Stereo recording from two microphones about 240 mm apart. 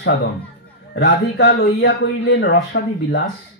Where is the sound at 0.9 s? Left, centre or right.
Left.